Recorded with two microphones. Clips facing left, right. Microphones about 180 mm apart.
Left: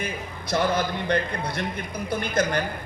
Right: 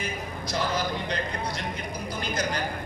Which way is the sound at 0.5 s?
55° left (ahead or behind).